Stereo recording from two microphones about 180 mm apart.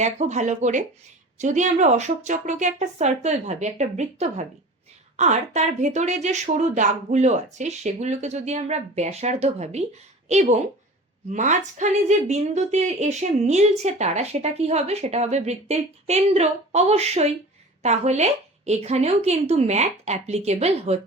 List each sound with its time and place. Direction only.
0.0 s speech: 40° right (ahead or behind)